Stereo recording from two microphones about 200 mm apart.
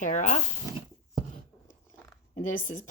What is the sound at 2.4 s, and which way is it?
Speech, 40° left (ahead or behind).